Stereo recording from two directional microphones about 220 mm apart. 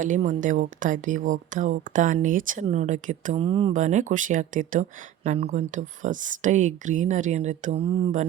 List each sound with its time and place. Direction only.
0.0 s speech: 35° right (ahead or behind)